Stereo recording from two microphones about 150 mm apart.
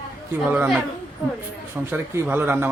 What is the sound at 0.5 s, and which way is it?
A man's voice, 5° right (ahead or behind).